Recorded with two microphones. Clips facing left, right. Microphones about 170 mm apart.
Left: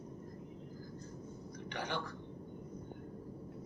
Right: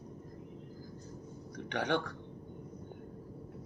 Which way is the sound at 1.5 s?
75° right (ahead or behind).